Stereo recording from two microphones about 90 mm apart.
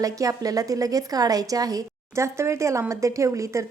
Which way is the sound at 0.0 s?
40° right (ahead or behind).